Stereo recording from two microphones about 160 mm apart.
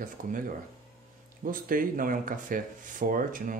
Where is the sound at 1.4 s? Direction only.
60° right (ahead or behind).